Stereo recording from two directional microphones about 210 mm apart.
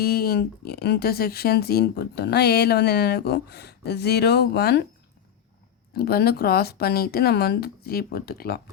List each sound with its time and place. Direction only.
0.0 s speech: 45° left (ahead or behind)
5.9 s speech: 50° left (ahead or behind)